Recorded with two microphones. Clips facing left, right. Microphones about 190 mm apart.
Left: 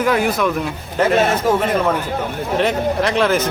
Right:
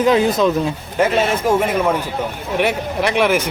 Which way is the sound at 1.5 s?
10° right (ahead or behind).